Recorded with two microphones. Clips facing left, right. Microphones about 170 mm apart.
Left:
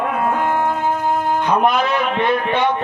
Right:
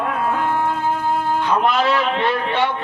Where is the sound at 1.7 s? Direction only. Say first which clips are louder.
Even; 15° left (ahead or behind).